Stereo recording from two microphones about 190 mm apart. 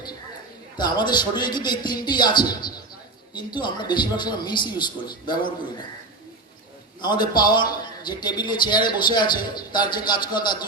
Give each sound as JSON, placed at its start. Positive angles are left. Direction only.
{"t": 0.8, "sound": "a man's voice", "side_deg": 25}
{"t": 7.0, "sound": "a man's voice", "side_deg": 25}